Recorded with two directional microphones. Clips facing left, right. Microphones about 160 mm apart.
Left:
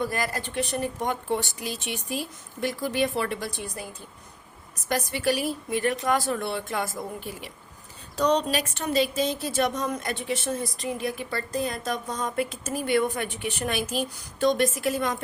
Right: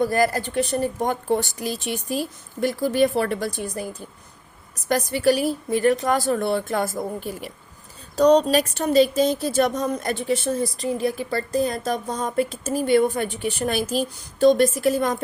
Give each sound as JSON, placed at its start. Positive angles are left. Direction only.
{"t": 0.0, "sound": "speech", "side_deg": -40}
{"t": 4.9, "sound": "speech", "side_deg": -40}